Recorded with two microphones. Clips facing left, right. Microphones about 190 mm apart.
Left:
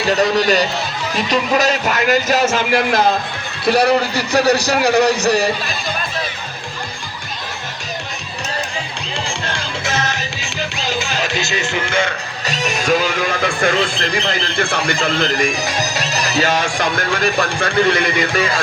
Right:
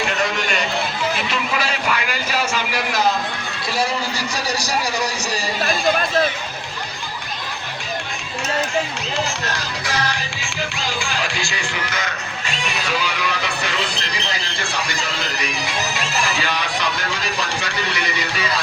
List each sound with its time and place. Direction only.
0.1 s a man's voice: 35° left (ahead or behind)
3.7 s a man's voice: 65° left (ahead or behind)
9.1 s music: 30° left (ahead or behind)
12.5 s speech: 40° left (ahead or behind)